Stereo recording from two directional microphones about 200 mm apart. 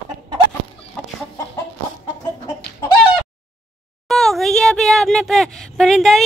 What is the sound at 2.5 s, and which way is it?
Chicken, 20° left (ahead or behind).